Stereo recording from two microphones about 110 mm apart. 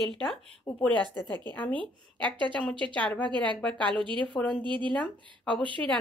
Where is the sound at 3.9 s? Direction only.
50° right (ahead or behind).